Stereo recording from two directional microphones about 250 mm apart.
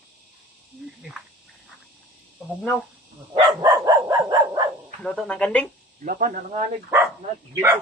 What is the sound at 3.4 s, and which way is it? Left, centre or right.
Dog, centre.